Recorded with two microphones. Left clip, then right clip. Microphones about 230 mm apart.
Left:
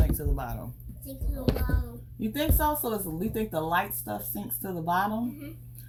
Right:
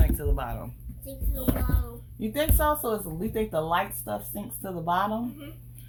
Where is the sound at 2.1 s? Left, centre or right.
Right.